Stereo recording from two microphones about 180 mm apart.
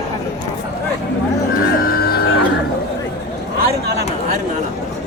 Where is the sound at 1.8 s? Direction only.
55° left (ahead or behind).